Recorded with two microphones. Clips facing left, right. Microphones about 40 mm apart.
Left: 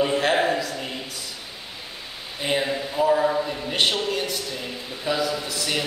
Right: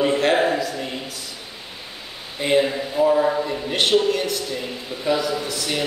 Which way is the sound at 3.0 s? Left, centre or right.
Centre.